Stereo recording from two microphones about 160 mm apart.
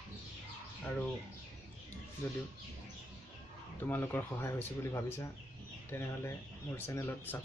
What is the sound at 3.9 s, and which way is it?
Speech, 10° left (ahead or behind).